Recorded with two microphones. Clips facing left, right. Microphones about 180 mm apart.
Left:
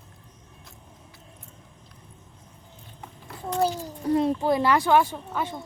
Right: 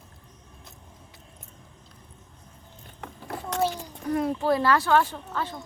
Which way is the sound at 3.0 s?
80° right.